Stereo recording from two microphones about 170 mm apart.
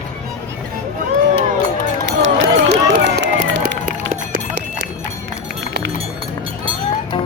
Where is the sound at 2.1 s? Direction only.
90° right.